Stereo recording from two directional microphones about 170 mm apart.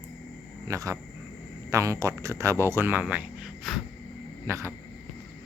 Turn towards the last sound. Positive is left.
turn(degrees=-15)  # may be behind; listen again after turning